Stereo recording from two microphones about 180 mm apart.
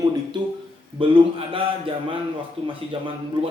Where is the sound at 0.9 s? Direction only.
30° right (ahead or behind).